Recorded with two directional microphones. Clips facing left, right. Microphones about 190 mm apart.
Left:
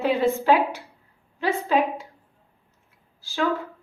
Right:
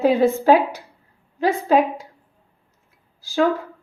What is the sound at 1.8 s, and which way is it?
Speech, 15° right (ahead or behind).